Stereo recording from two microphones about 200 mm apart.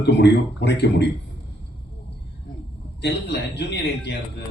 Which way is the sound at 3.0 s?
55° left (ahead or behind).